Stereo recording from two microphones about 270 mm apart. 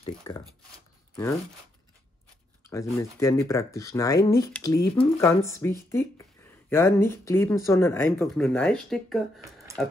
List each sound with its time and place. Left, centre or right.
0.0 s speech: centre
2.6 s speech: centre